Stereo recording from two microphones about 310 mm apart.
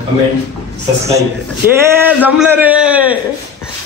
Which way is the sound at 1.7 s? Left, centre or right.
Centre.